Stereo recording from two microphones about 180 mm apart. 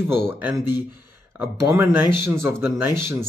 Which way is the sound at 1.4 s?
15° right (ahead or behind).